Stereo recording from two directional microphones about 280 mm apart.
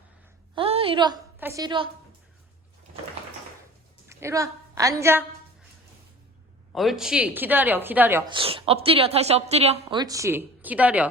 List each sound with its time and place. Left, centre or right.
0.5 s a woman's voice: centre
4.1 s a woman's voice: centre
6.7 s a woman's voice: centre
8.3 s a woman's voice: centre